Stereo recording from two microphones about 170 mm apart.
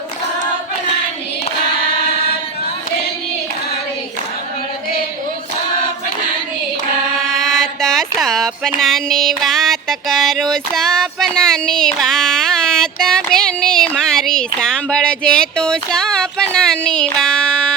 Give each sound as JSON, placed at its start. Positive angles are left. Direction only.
{"t": 7.3, "sound": "speech", "side_deg": 0}